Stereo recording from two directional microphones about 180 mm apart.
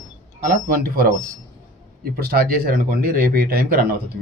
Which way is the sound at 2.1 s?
60° right (ahead or behind).